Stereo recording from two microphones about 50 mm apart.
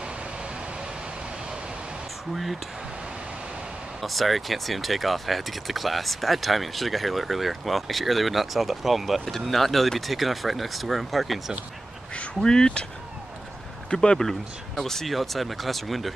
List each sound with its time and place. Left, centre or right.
4.0 s speech: centre
12.2 s speech: centre
13.8 s speech: centre